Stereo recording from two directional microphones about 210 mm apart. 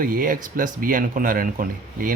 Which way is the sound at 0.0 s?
40° right (ahead or behind).